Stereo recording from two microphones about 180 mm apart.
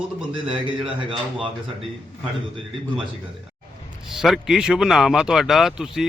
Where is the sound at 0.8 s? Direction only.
30° right (ahead or behind).